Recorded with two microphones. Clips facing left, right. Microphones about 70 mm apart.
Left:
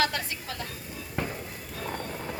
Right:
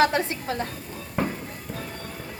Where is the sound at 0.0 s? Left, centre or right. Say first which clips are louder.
Right 7 dB; right.